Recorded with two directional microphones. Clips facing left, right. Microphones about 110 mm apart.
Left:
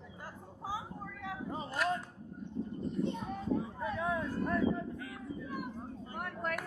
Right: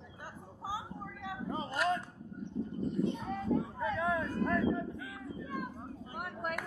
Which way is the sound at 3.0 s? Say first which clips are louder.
Right 1 dB; centre (ahead or behind).